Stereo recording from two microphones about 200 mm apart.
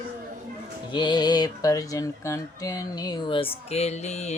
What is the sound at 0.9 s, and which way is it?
Speech, 20° left (ahead or behind).